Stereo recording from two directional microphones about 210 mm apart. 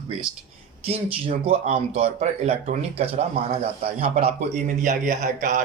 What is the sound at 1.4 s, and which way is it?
A man's voice, 30° right (ahead or behind).